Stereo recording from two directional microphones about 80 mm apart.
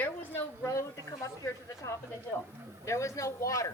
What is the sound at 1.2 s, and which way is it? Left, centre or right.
Speech, left.